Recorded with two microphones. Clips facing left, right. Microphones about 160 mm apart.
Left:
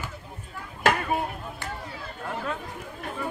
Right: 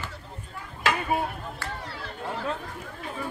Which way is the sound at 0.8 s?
50° left (ahead or behind).